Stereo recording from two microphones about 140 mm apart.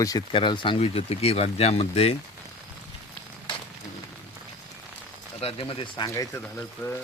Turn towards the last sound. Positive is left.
turn(degrees=15)  # may be behind; listen again after turning